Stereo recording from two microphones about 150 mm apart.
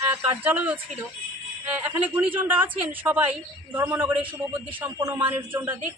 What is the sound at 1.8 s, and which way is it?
Speech, 15° right (ahead or behind).